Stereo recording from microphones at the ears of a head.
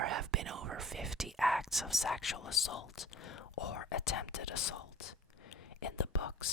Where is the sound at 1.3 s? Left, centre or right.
Centre.